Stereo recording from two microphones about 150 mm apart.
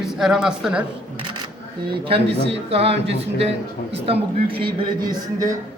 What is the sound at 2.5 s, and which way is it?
Speech, 40° right (ahead or behind).